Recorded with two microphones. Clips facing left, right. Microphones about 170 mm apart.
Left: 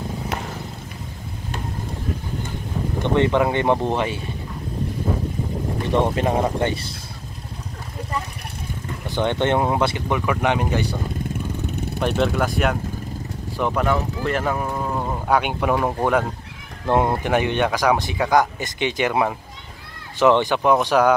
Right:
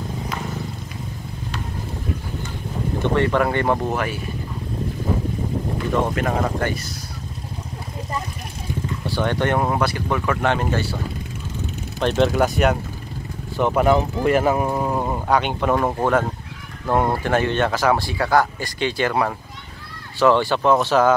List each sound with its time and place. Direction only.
3.2 s speech: 15° left (ahead or behind)
5.9 s speech: 30° left (ahead or behind)
9.0 s speech: 20° left (ahead or behind)
12.0 s speech: centre (ahead or behind)
14.5 s speech: 20° right (ahead or behind)
15.2 s speech: 10° left (ahead or behind)
16.9 s speech: 15° left (ahead or behind)